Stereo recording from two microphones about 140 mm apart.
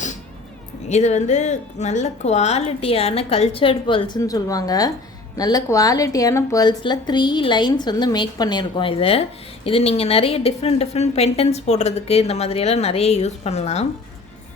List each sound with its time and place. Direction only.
0.9 s a woman's voice: 55° left (ahead or behind); by 4.2 s 35° left (ahead or behind)
4.2 s a woman's voice: 25° left (ahead or behind); by 13.8 s 50° left (ahead or behind)